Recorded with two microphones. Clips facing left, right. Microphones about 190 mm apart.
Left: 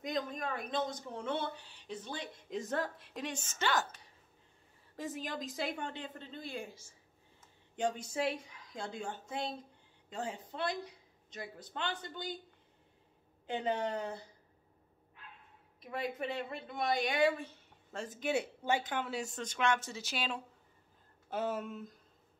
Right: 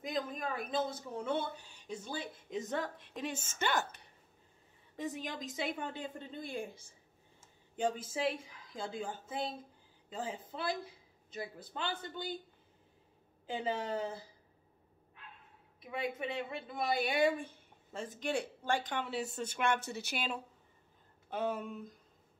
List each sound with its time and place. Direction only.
0.0 s speech: centre (ahead or behind)
3.4 s a woman's voice: 50° right (ahead or behind)
4.9 s speech: centre (ahead or behind)
6.4 s a woman's voice: 55° right (ahead or behind)
7.8 s speech: 5° right (ahead or behind)
13.5 s speech: 5° right (ahead or behind)
15.8 s speech: centre (ahead or behind)
17.9 s speech: centre (ahead or behind)
19.8 s speech: 60° right (ahead or behind)
21.3 s speech: 5° left (ahead or behind)